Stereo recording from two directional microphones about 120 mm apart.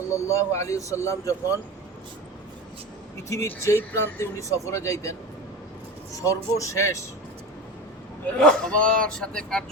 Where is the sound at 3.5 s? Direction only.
20° left (ahead or behind).